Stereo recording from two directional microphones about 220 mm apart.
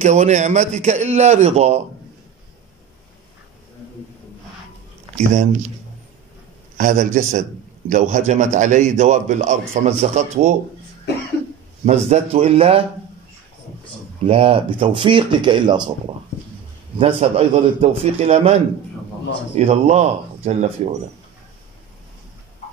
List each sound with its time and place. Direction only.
0.0 s a man's voice: 30° right (ahead or behind)
5.3 s a man's voice: 35° right (ahead or behind)
6.8 s a man's voice: 35° right (ahead or behind)
11.8 s speech: 30° right (ahead or behind)
14.2 s speech: 25° right (ahead or behind)
17.0 s speech: 25° right (ahead or behind)